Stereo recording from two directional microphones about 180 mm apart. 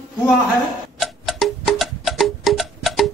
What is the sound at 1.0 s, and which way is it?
Music, centre (ahead or behind).